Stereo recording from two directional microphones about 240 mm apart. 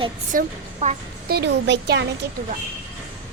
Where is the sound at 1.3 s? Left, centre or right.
Right.